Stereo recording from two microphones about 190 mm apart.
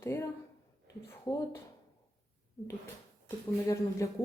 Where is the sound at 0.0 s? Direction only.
15° left (ahead or behind).